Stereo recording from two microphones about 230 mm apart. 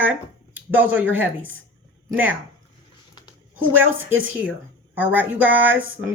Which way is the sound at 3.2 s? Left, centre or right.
Centre.